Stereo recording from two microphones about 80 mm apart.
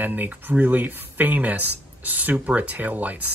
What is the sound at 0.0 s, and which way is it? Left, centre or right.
Speech, right.